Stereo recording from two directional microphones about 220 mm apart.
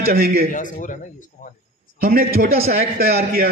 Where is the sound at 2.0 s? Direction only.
40° right (ahead or behind).